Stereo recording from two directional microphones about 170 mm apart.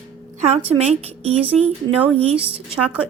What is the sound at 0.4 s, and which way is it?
Speech, 40° right (ahead or behind).